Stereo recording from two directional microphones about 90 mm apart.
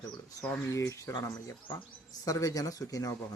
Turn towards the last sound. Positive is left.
turn(degrees=40)  # may be behind; listen again after turning